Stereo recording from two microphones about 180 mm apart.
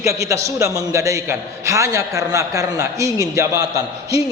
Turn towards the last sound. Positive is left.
turn(degrees=-20)  # may be behind; listen again after turning